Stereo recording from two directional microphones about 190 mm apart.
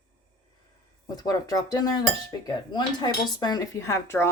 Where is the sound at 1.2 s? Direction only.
20° left (ahead or behind).